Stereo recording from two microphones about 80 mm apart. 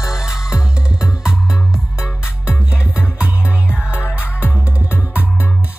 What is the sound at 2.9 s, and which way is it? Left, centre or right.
Music, centre.